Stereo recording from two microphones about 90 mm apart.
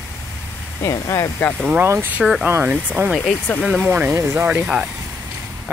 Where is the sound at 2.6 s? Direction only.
15° right (ahead or behind).